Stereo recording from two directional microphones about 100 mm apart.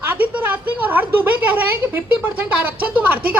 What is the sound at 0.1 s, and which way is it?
A woman's voice, 20° right (ahead or behind).